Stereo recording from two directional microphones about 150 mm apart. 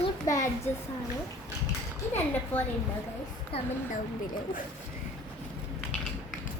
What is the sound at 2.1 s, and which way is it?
Speech, 10° left (ahead or behind).